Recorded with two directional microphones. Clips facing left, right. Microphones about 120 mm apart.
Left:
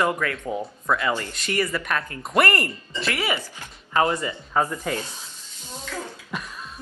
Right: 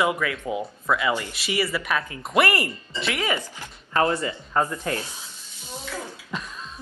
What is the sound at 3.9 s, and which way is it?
Speech, 25° left (ahead or behind).